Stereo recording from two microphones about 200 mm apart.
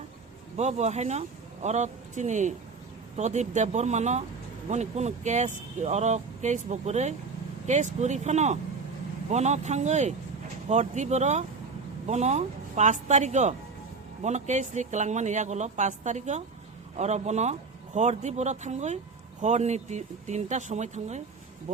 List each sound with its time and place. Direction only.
0.5 s speech: 35° right (ahead or behind)